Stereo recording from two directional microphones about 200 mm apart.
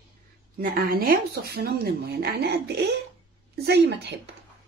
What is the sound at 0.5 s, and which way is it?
A woman's voice, 50° right (ahead or behind).